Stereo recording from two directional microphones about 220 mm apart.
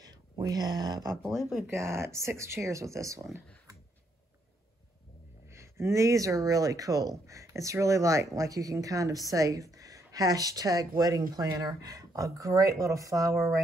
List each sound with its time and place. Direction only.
0.0 s speech: 15° right (ahead or behind)
3.3 s speech: centre (ahead or behind)
5.5 s speech: 10° right (ahead or behind)